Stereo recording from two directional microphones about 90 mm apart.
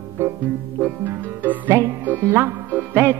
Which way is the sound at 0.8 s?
20° right (ahead or behind).